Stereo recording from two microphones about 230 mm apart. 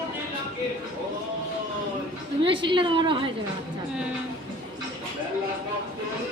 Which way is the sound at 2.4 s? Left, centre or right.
Right.